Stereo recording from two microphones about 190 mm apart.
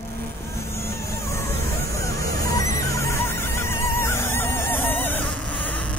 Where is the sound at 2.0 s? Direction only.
15° left (ahead or behind).